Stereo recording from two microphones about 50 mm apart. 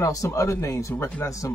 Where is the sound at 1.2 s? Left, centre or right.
Left.